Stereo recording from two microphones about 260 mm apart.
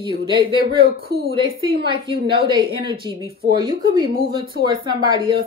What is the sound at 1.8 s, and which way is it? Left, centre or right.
A woman's voice, centre.